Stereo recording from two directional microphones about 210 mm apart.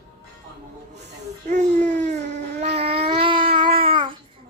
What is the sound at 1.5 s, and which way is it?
Baby cry, 35° right (ahead or behind).